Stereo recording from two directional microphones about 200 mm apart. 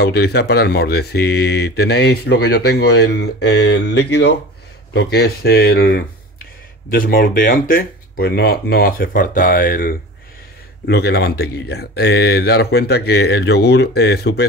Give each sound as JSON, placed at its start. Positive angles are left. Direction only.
{"t": 0.0, "sound": "speech", "side_deg": 55}